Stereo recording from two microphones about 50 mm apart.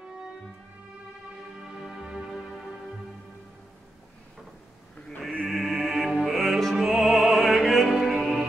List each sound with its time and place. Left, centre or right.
1.6 s music: centre
2.3 s music: centre
5.5 s music: centre